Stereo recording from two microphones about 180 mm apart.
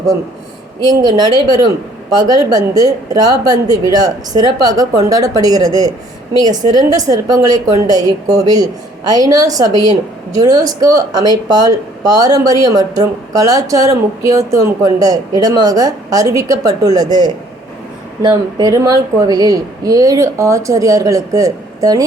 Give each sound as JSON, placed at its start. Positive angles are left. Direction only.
{"t": 0.9, "sound": "a woman's voice", "side_deg": -20}